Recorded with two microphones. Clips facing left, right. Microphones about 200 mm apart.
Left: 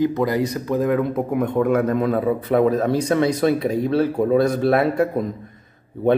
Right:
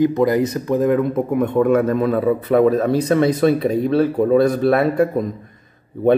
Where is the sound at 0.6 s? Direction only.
20° right (ahead or behind).